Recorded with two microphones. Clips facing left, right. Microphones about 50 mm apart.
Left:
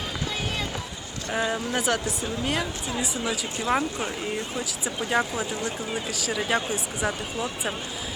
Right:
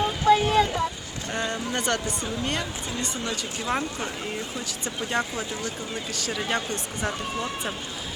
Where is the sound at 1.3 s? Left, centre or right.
Centre.